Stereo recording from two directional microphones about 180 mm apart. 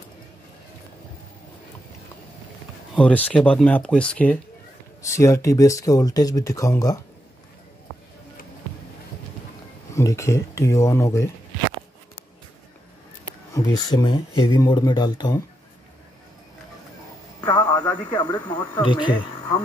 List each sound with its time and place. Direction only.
3.0 s speech: 10° left (ahead or behind)
9.9 s speech: 15° left (ahead or behind)
13.5 s speech: 20° left (ahead or behind)
17.4 s music: 20° left (ahead or behind)
18.0 s speech: 25° left (ahead or behind)